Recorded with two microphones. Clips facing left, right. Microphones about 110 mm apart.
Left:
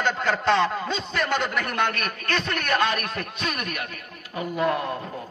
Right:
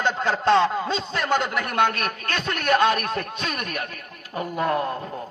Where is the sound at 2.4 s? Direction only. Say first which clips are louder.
Right 6 dB; 40° right (ahead or behind).